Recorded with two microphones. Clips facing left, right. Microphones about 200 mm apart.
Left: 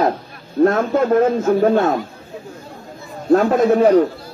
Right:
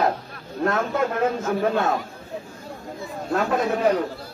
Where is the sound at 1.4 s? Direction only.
40° left (ahead or behind).